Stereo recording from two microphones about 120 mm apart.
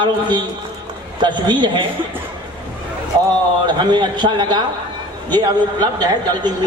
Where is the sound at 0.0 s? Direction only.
40° right (ahead or behind).